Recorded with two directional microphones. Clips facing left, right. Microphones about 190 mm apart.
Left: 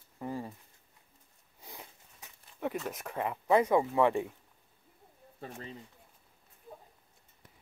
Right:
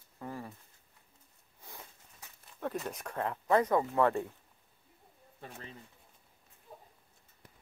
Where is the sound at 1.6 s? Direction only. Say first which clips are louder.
Left 2 dB; 15° left (ahead or behind).